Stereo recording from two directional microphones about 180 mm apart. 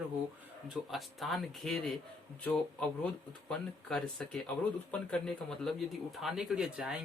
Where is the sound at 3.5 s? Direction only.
5° left (ahead or behind).